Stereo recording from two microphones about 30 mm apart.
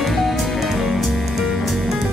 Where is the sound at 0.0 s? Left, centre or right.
Centre.